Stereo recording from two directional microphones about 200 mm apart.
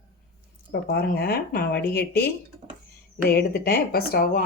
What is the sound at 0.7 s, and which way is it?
Speech, 50° left (ahead or behind).